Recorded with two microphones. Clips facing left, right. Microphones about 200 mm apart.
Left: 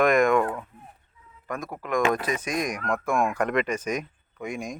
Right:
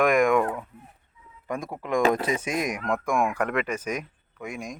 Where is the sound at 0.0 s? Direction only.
10° right (ahead or behind).